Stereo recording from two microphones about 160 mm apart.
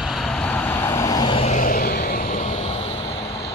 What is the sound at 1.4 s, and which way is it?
Vehicle, 55° left (ahead or behind).